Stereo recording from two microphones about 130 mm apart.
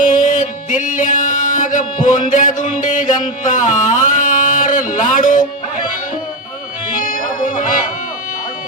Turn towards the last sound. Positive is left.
turn(degrees=90)